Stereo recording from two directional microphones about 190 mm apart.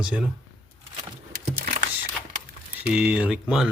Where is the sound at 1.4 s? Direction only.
45° right (ahead or behind).